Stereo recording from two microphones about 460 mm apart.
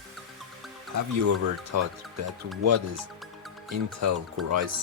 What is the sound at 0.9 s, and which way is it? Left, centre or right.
Speech, right.